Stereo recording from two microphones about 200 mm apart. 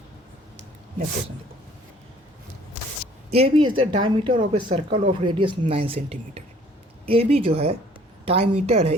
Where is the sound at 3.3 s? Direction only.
25° right (ahead or behind).